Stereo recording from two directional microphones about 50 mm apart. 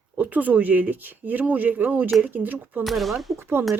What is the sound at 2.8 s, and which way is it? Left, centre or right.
Speech, centre.